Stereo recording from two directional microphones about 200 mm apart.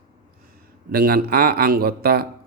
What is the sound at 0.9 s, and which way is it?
A man's voice, 50° right (ahead or behind).